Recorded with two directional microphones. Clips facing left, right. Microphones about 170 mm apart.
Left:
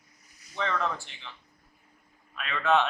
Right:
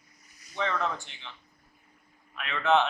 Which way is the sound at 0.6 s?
15° right (ahead or behind).